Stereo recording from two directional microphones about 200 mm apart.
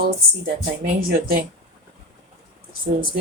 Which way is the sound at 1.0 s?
45° right (ahead or behind).